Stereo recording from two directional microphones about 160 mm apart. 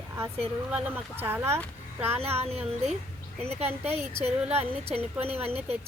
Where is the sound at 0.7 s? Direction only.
15° right (ahead or behind).